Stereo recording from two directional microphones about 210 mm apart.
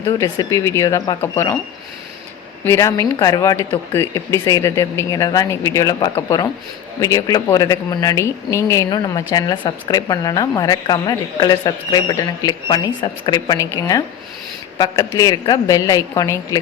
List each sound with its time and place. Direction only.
0.2 s speech: 15° left (ahead or behind)
2.6 s speech: 15° left (ahead or behind)